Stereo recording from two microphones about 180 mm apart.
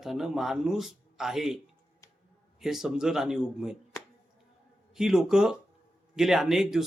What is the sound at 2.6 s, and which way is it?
Speech, centre (ahead or behind).